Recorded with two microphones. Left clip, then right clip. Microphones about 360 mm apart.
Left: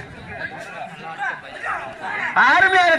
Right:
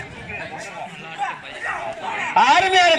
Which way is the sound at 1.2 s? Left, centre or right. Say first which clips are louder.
Even; centre.